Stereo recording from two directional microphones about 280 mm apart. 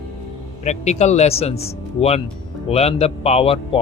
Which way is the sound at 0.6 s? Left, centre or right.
Left.